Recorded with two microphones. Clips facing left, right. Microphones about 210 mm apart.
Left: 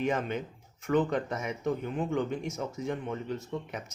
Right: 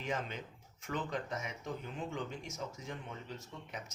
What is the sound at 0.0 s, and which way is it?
Speech, 60° left (ahead or behind).